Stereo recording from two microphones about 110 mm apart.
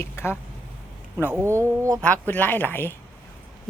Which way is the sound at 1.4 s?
25° right (ahead or behind).